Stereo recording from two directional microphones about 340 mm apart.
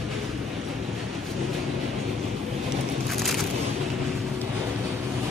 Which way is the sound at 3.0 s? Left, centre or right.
Centre.